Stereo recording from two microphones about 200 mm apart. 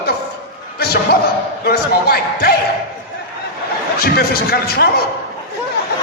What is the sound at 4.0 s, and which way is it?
Speech, 50° left (ahead or behind).